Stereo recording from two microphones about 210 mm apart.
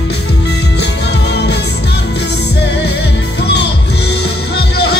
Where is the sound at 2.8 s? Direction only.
50° left (ahead or behind).